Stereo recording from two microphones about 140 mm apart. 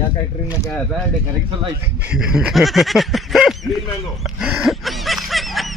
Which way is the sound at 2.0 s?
5° right (ahead or behind).